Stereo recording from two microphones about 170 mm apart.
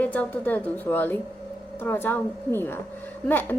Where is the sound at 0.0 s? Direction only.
10° left (ahead or behind).